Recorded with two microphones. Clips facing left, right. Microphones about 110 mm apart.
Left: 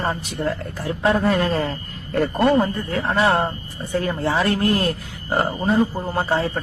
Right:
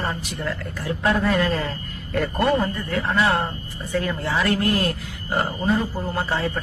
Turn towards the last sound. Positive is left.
turn(degrees=30)  # may be behind; listen again after turning